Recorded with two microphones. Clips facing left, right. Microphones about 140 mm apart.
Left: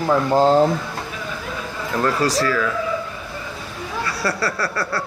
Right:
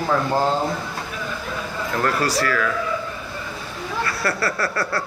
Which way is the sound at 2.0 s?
15° left (ahead or behind).